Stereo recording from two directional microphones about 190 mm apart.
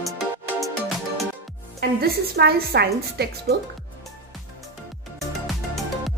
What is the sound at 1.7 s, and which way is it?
A woman's voice, 55° right (ahead or behind).